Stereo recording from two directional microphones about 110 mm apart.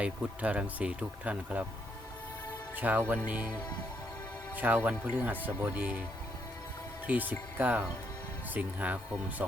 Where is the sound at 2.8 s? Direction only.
15° right (ahead or behind).